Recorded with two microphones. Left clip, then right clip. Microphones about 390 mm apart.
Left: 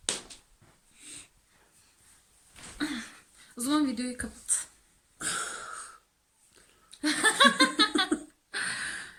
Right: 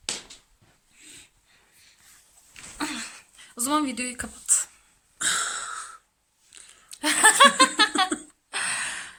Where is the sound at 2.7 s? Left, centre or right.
Centre.